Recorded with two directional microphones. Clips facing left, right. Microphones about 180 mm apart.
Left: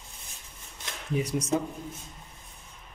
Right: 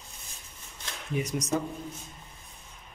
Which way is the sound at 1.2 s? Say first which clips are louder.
Left 2 dB; 30° left (ahead or behind).